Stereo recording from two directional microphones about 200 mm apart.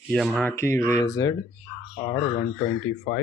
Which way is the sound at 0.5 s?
15° left (ahead or behind).